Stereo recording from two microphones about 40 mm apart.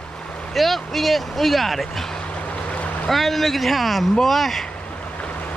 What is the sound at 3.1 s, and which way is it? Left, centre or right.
Speech, centre.